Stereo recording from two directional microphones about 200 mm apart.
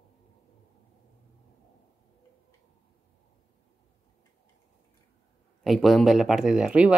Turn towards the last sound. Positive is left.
turn(degrees=-5)  # may be behind; listen again after turning